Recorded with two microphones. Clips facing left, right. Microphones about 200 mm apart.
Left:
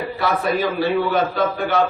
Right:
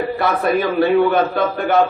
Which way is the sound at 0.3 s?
55° right (ahead or behind).